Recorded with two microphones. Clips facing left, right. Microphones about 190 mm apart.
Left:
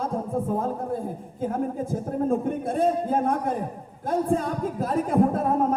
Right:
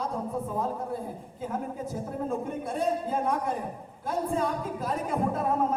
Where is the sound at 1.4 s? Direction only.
50° left (ahead or behind).